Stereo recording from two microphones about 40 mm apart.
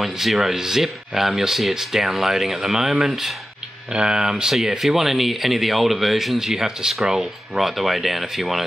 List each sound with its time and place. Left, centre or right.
0.0 s speech: centre
3.9 s speech: right
4.6 s speech: centre